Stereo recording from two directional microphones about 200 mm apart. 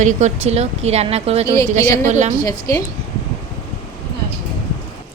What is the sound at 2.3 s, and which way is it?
Speech, 20° left (ahead or behind).